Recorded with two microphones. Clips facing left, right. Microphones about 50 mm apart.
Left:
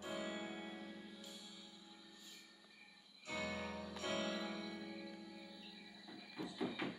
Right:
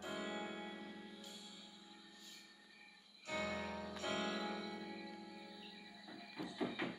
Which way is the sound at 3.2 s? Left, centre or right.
Centre.